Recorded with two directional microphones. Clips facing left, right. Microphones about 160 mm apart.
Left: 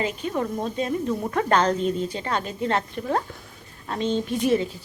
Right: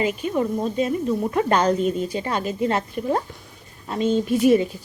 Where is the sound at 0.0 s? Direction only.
10° right (ahead or behind).